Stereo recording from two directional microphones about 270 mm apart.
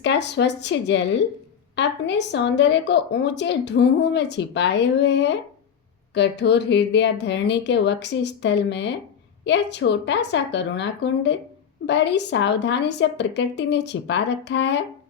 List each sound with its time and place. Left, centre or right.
0.0 s speech: left